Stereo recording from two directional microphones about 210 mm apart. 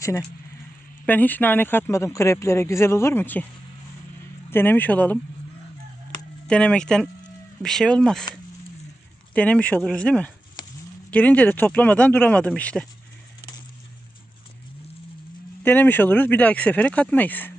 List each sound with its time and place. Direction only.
0.0 s speech: 15° left (ahead or behind)
4.5 s speech: 10° left (ahead or behind)
6.5 s speech: 5° left (ahead or behind)
9.3 s speech: 5° left (ahead or behind)
15.6 s speech: 10° left (ahead or behind)